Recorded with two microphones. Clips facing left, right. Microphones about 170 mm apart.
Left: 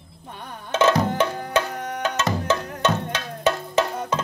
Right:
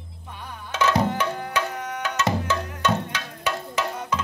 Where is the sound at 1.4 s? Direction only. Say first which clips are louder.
Left 3 dB; 40° left (ahead or behind).